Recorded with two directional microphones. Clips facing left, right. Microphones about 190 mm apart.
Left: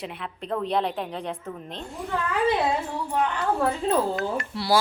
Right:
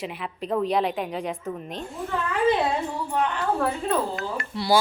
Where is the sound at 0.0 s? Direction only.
5° right (ahead or behind).